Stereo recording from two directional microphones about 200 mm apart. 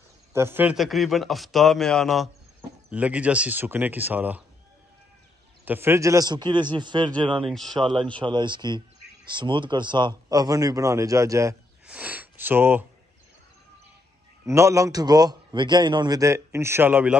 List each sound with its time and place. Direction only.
0.3 s a man's voice: 10° right (ahead or behind)
5.7 s speech: 10° right (ahead or behind)
7.4 s a man's voice: centre (ahead or behind)
7.9 s a man's voice: 25° right (ahead or behind)
14.4 s a man's voice: 15° right (ahead or behind)